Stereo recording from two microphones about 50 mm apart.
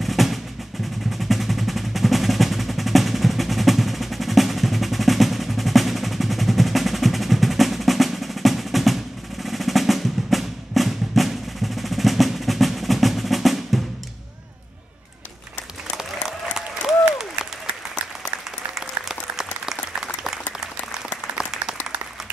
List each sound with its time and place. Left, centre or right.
0.0 s percussion: centre
1.1 s music: centre
16.0 s applause: centre
18.8 s applause: centre